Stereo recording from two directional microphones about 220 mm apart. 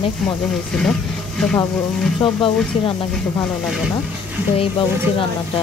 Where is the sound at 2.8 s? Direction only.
25° left (ahead or behind).